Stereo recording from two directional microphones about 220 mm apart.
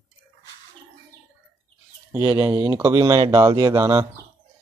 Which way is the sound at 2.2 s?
15° right (ahead or behind).